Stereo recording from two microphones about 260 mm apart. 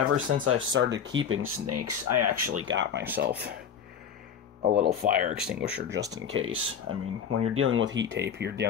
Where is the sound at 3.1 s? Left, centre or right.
Right.